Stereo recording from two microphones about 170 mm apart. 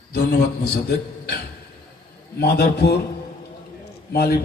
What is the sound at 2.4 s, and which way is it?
Speech, 75° left (ahead or behind).